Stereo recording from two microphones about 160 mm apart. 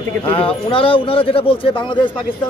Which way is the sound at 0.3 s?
35° left (ahead or behind).